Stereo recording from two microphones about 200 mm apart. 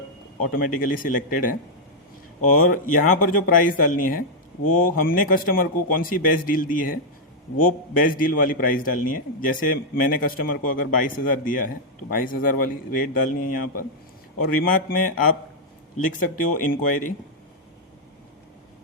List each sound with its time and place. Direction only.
0.5 s a man's voice: 45° left (ahead or behind)
2.7 s a man's voice: 40° left (ahead or behind)